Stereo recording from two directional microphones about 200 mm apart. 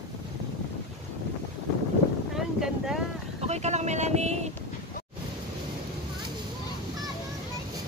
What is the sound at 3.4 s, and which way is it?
Speech, 35° right (ahead or behind).